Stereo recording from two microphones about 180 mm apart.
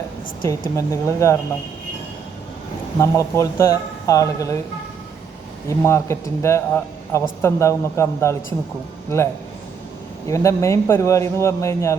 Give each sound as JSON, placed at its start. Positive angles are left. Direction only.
{"t": 0.8, "sound": "a man's voice", "side_deg": 15}
{"t": 3.0, "sound": "a man's voice", "side_deg": 15}
{"t": 5.6, "sound": "a man's voice", "side_deg": 15}